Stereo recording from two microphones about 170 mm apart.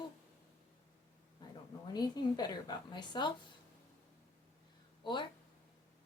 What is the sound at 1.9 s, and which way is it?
Speech, 25° left (ahead or behind).